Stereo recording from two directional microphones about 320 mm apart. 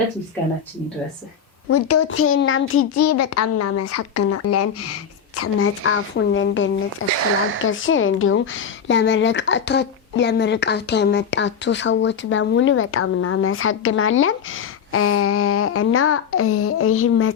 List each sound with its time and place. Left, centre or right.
1.7 s a child's voice: left